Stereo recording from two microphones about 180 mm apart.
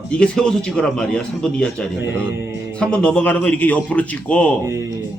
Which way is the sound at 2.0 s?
10° right (ahead or behind).